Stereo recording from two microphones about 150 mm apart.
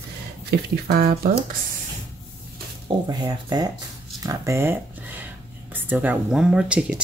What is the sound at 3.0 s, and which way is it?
Speech, 25° right (ahead or behind).